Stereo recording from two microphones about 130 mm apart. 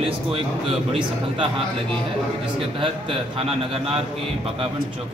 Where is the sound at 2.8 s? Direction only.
45° right (ahead or behind).